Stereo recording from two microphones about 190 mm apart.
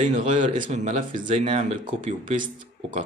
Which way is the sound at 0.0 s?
40° right (ahead or behind).